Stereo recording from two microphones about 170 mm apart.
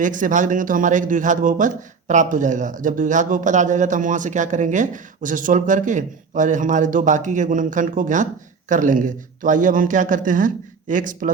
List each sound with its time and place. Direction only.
0.0 s a man's voice: 50° right (ahead or behind)